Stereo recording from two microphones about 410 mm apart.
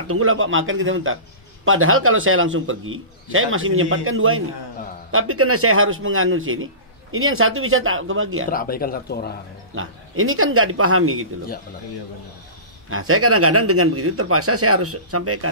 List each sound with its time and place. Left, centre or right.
0.1 s a man's voice: right
8.5 s speech: left
9.8 s a man's voice: right
12.9 s a man's voice: right